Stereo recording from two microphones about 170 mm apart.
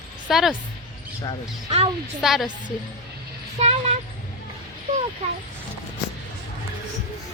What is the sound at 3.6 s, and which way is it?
Speech, 40° right (ahead or behind).